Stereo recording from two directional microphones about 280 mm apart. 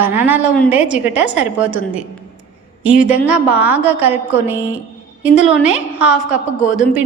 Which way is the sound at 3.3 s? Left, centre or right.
Centre.